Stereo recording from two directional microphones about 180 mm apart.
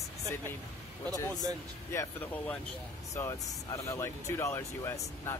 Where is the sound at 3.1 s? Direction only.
15° left (ahead or behind).